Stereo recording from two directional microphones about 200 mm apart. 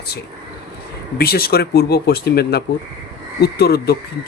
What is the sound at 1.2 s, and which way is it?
Speech, 50° left (ahead or behind).